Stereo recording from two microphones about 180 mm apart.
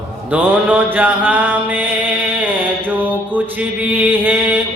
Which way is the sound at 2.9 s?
10° right (ahead or behind).